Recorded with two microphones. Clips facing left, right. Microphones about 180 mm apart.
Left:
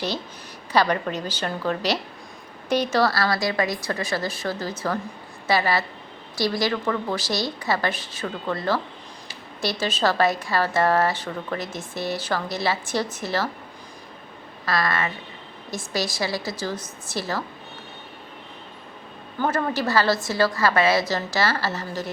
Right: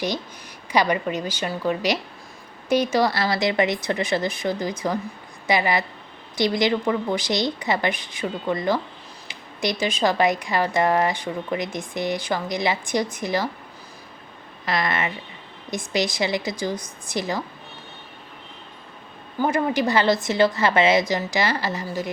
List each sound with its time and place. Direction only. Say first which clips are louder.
0.7 s speech: even; 10° right (ahead or behind)
14.6 s speech: even; 20° right (ahead or behind)
19.4 s speech: right 3 dB; 10° right (ahead or behind)